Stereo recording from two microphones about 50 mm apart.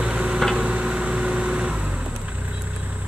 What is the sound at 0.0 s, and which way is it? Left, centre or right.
Tick-tock, right.